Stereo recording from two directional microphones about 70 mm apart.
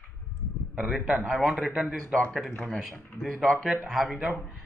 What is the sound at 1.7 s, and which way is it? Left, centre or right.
Speech, centre.